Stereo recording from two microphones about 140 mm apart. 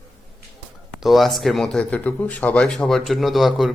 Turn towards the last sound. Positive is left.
turn(degrees=0)  # may be behind; listen again after turning